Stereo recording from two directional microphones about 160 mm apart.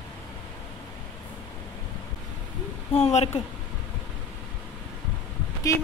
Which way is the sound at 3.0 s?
45° left (ahead or behind).